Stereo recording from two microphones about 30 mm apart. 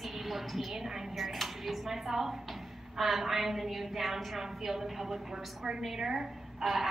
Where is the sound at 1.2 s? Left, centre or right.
Centre.